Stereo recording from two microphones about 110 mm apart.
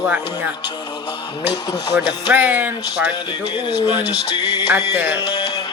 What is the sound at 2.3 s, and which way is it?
Speech, 15° right (ahead or behind).